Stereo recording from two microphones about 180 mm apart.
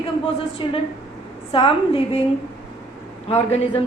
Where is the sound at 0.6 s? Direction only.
30° left (ahead or behind).